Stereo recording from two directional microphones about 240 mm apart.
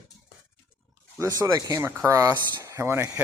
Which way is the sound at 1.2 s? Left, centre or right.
Centre.